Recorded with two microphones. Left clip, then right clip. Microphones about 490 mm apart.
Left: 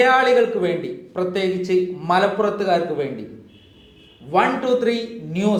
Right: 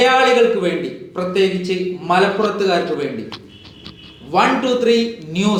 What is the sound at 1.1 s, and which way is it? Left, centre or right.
A man's voice, left.